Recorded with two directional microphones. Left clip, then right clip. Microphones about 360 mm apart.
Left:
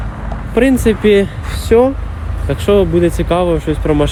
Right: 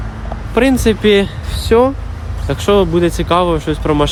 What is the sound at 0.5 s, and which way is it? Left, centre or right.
Speech, centre.